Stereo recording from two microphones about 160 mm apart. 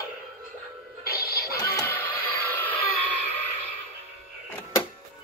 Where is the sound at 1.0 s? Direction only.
70° left (ahead or behind).